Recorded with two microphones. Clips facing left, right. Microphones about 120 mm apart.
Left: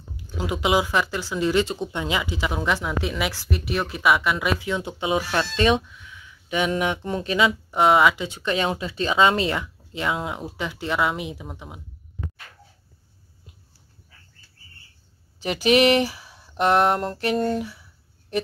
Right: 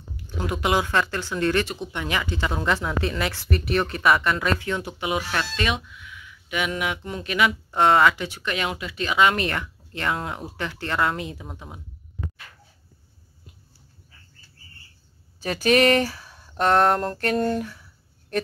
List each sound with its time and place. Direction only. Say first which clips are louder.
0.4 s speech: left 1 dB; 15° left (ahead or behind)
7.7 s speech: even; 15° left (ahead or behind)
8.4 s speech: left 4 dB; 30° left (ahead or behind); by 11.8 s 10° left (ahead or behind)
15.4 s speech: left 1 dB; 15° left (ahead or behind)